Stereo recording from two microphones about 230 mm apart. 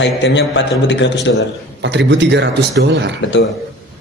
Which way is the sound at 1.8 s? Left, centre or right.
Right.